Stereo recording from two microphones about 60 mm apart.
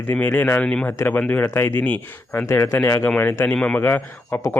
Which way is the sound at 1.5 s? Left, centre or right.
Left.